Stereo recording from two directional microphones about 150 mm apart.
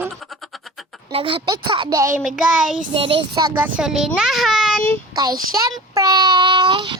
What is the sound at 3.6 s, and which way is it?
A child's voice, 5° right (ahead or behind).